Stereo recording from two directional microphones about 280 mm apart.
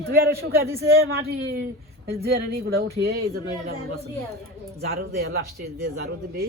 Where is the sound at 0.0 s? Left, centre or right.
Right.